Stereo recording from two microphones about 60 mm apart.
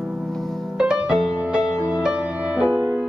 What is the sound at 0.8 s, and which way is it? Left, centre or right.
Music, centre.